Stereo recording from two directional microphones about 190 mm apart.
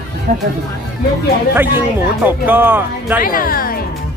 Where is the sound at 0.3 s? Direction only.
45° right (ahead or behind).